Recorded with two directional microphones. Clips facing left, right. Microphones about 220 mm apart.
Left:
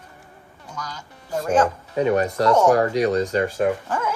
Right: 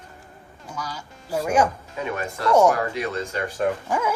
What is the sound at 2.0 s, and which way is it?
Speech, 40° left (ahead or behind).